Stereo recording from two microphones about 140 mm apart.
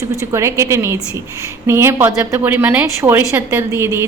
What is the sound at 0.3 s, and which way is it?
A woman's voice, 20° right (ahead or behind).